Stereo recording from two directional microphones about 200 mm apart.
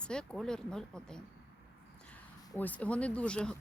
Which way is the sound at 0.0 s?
5° left (ahead or behind).